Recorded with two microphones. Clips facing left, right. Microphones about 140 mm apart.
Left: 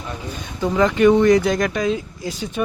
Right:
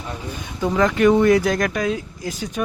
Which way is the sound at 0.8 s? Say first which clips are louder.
Left 1 dB; centre (ahead or behind).